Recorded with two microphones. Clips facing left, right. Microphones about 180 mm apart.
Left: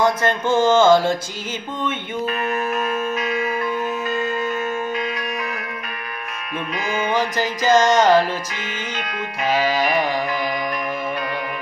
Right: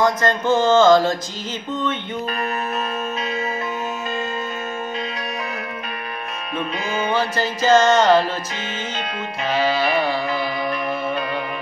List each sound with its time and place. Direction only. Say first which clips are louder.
0.0 s music: even; 10° left (ahead or behind)
2.2 s music: left 4 dB; 30° right (ahead or behind)
7.1 s music: even; 15° left (ahead or behind)
9.4 s music: even; 10° left (ahead or behind)